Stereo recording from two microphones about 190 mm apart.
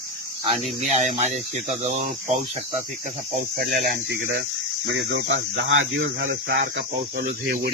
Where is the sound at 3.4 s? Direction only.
60° right (ahead or behind).